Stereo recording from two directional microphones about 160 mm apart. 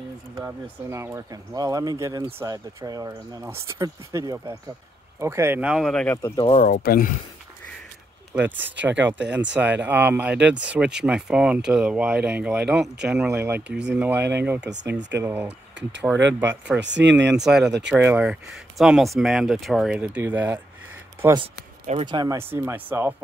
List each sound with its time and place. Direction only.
0.4 s speech: 15° right (ahead or behind)
6.3 s speech: 35° left (ahead or behind)
6.6 s speech: 65° left (ahead or behind)
8.4 s speech: 10° right (ahead or behind)
9.2 s speech: 90° right
9.5 s speech: 10° right (ahead or behind)
14.7 s speech: 90° right
15.1 s speech: 10° right (ahead or behind)
16.8 s speech: 90° right
17.4 s speech: 5° right (ahead or behind)
22.0 s speech: 25° right (ahead or behind)